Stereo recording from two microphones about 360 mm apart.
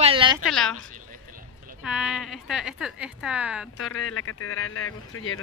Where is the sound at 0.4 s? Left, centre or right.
Centre.